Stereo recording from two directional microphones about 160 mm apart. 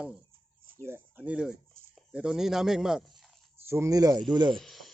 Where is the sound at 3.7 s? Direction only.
20° right (ahead or behind).